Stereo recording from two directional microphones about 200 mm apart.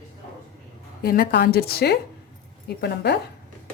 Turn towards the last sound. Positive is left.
turn(degrees=55)  # may be behind; listen again after turning